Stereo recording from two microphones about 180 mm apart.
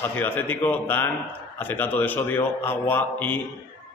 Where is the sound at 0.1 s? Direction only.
10° left (ahead or behind).